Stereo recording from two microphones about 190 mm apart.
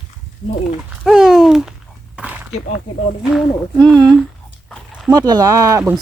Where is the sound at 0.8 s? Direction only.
5° right (ahead or behind).